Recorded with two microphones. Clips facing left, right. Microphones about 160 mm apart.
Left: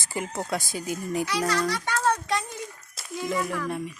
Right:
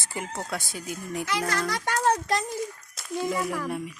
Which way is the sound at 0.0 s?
Centre (ahead or behind).